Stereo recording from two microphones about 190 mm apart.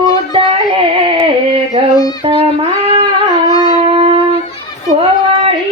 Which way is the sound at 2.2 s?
25° right (ahead or behind).